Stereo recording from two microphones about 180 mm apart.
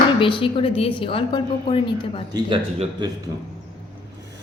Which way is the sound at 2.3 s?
25° right (ahead or behind).